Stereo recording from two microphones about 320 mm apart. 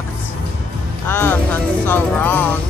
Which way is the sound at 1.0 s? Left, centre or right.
Centre.